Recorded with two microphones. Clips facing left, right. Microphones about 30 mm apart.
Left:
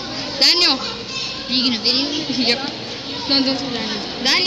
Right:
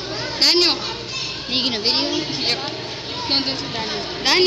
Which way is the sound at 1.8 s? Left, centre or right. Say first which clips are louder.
Left 1 dB; left.